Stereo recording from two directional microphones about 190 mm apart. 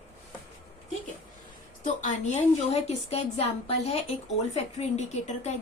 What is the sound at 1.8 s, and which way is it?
A woman's voice, 40° left (ahead or behind).